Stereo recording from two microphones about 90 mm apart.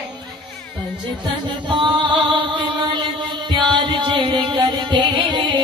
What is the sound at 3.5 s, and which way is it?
Music, 60° right (ahead or behind).